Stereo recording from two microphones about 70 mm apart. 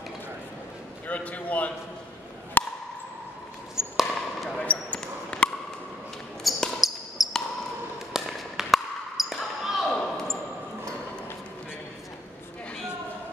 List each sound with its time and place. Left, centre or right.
1.0 s a man's voice: left
2.6 s a sound: left
3.7 s fireworks: centre
4.6 s basketball bounce: centre
6.4 s basketball bounce: centre
9.8 s basketball bounce: centre